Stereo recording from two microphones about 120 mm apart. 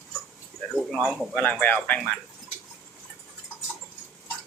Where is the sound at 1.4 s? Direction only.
15° left (ahead or behind).